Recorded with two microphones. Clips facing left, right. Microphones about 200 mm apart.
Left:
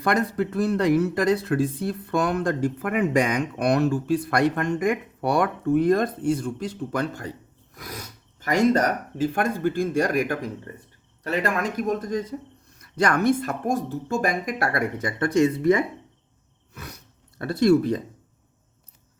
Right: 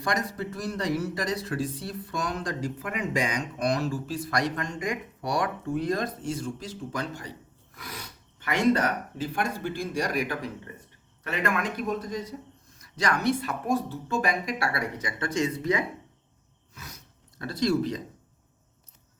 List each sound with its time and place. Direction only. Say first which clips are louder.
0.0 s speech: left 7 dB; 60° left (ahead or behind)
7.8 s speech: left 4 dB; 45° left (ahead or behind)
11.2 s speech: left 4 dB; 35° left (ahead or behind); by 15.8 s 55° left (ahead or behind)
16.7 s gasp: left 6 dB; 60° left (ahead or behind)